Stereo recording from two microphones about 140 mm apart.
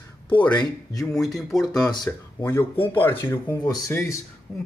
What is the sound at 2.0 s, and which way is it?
Speech, 15° left (ahead or behind).